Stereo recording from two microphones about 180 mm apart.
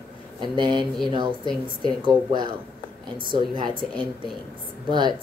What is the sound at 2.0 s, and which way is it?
Speech, 25° right (ahead or behind).